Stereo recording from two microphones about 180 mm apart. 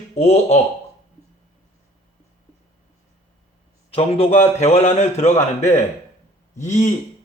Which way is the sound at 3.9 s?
35° left (ahead or behind).